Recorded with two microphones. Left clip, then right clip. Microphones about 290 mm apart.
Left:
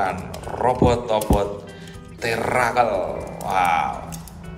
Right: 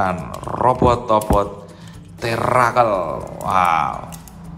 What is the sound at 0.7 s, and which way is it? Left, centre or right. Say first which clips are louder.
Speech: right 3 dB; centre.